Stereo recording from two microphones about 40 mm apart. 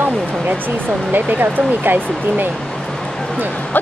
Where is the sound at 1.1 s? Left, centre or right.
Right.